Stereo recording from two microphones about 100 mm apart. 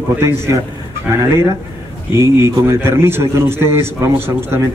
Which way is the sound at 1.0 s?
30° right (ahead or behind).